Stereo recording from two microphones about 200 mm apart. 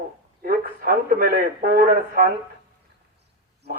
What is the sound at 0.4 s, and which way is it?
A man's voice, 45° right (ahead or behind).